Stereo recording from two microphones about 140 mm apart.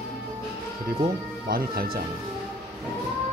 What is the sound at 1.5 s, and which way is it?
Speech, 90° right.